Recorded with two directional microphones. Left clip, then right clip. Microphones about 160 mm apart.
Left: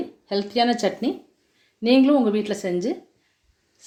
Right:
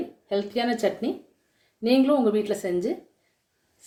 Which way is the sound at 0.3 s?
45° left (ahead or behind).